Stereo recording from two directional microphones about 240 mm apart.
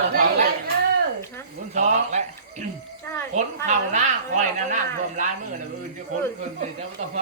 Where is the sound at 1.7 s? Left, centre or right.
Right.